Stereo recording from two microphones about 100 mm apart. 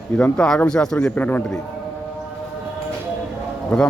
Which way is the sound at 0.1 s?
10° left (ahead or behind).